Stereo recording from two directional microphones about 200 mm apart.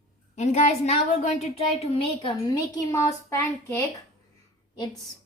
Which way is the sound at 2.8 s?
15° left (ahead or behind).